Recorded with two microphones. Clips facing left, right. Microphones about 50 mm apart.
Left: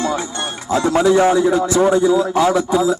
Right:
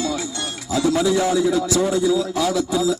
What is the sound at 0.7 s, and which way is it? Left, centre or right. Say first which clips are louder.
A man's voice: left 4 dB; left.